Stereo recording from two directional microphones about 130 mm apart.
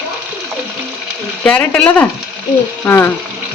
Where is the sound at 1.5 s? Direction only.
10° left (ahead or behind).